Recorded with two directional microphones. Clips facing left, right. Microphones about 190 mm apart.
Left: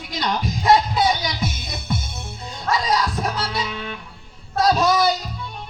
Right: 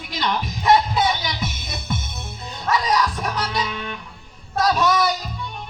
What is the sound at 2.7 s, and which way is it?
Music, 25° left (ahead or behind).